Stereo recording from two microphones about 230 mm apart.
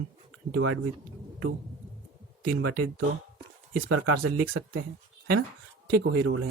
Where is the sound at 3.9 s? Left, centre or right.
Right.